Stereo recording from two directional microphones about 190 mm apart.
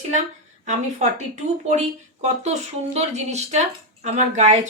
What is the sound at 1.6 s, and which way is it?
Speech, 40° right (ahead or behind).